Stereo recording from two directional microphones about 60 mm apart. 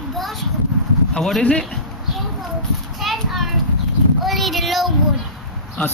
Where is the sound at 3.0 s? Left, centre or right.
Centre.